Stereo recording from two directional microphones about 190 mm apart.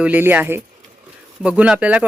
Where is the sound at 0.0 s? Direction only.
10° right (ahead or behind).